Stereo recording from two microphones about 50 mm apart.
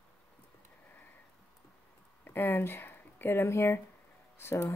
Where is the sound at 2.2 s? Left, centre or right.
Left.